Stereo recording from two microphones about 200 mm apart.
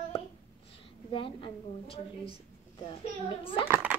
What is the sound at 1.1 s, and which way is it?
A woman's voice, 25° left (ahead or behind).